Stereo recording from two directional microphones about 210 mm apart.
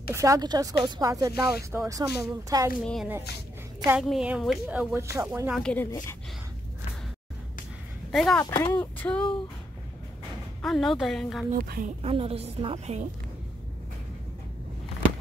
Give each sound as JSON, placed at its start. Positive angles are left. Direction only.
{"t": 0.1, "sound": "speech", "side_deg": -15}
{"t": 2.8, "sound": "a woman's voice", "side_deg": 0}
{"t": 5.6, "sound": "a woman's voice", "side_deg": 5}
{"t": 8.1, "sound": "speech", "side_deg": 0}
{"t": 8.4, "sound": "speech", "side_deg": 15}
{"t": 10.6, "sound": "a woman's voice", "side_deg": 0}
{"t": 11.5, "sound": "speech", "side_deg": -40}
{"t": 12.0, "sound": "a woman's voice", "side_deg": -30}